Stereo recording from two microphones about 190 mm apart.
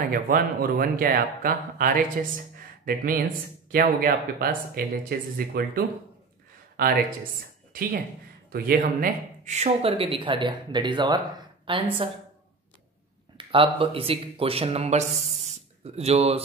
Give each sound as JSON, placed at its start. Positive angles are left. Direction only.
{"t": 0.1, "sound": "speech", "side_deg": -50}
{"t": 8.5, "sound": "speech", "side_deg": -50}
{"t": 13.4, "sound": "speech", "side_deg": -30}